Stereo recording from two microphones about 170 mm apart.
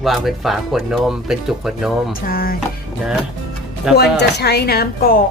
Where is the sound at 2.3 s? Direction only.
60° left (ahead or behind).